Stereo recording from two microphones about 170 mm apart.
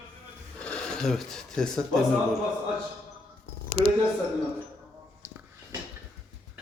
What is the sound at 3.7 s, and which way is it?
Speech, 40° left (ahead or behind).